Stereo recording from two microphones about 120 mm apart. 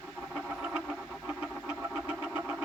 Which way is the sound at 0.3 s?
5° right (ahead or behind).